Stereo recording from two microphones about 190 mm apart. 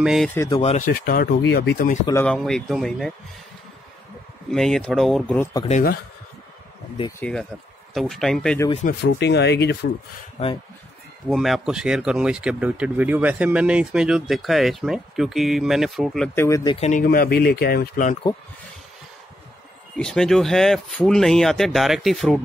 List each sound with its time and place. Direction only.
0.0 s speech: centre (ahead or behind)
0.6 s speech: 35° left (ahead or behind)
2.2 s speech: 5° left (ahead or behind)
4.5 s speech: centre (ahead or behind)
7.2 s speech: 5° left (ahead or behind)
9.0 s speech: 65° left (ahead or behind)
11.2 s speech: centre (ahead or behind)
16.3 s speech: 15° left (ahead or behind)
16.7 s speech: 35° left (ahead or behind)
17.0 s speech: 50° left (ahead or behind)
20.0 s speech: 5° left (ahead or behind)